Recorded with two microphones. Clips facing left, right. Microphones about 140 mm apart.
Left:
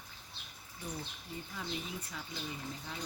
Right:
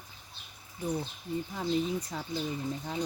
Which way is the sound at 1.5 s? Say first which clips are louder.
Right 11 dB; 40° right (ahead or behind).